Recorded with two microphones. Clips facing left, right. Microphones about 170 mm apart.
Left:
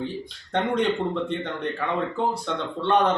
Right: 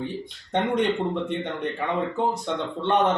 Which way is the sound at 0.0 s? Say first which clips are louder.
Even; 20° right (ahead or behind).